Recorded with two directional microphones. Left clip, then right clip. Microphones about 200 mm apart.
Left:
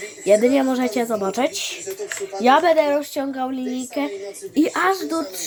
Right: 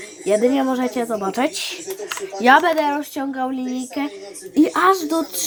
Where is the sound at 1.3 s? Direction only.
5° left (ahead or behind).